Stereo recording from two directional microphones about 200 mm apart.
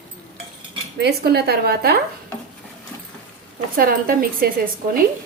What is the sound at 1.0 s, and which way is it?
Speech, 55° right (ahead or behind).